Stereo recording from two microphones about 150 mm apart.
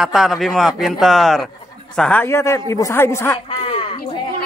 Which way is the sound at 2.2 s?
20° left (ahead or behind).